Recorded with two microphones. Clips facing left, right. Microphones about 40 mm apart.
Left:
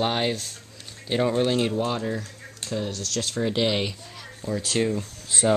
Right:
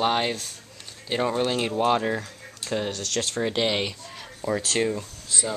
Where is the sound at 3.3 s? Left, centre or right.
Centre.